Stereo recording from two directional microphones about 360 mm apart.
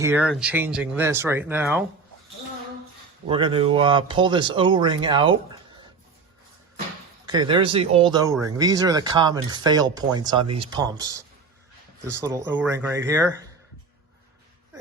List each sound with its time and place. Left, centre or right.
0.0 s speech: centre
3.2 s speech: centre
7.3 s speech: centre
12.6 s speech: centre